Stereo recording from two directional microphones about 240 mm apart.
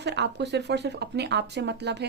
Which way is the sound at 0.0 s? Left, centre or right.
Right.